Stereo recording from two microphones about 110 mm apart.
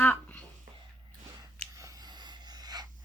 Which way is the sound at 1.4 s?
30° right (ahead or behind).